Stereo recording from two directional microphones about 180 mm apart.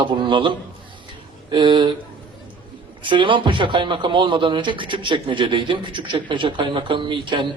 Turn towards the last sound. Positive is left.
turn(degrees=-25)  # may be behind; listen again after turning